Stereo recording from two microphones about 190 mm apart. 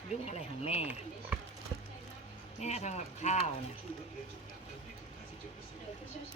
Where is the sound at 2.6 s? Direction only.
35° left (ahead or behind).